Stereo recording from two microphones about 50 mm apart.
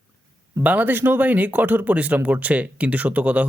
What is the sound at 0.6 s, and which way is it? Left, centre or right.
Speech, right.